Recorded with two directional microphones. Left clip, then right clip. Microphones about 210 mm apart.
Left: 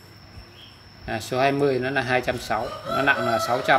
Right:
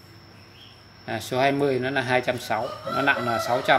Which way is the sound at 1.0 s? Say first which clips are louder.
Left 1 dB; centre (ahead or behind).